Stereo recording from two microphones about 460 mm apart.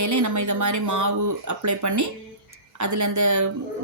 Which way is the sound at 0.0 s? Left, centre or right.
Right.